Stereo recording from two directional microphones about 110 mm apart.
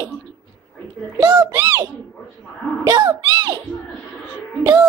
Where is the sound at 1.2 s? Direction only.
35° right (ahead or behind).